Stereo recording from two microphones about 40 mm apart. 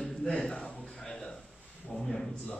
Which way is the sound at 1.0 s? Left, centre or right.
Centre.